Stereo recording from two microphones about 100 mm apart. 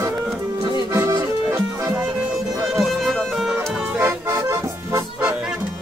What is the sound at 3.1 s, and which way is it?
Music, centre (ahead or behind).